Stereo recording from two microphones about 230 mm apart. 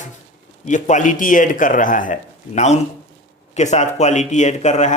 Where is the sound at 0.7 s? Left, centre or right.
Left.